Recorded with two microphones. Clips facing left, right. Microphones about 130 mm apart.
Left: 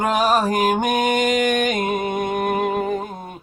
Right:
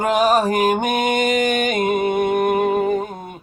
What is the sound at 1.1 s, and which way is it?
Music, 10° right (ahead or behind).